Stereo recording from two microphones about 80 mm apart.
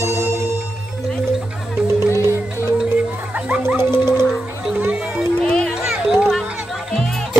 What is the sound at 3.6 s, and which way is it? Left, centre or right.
Music, right.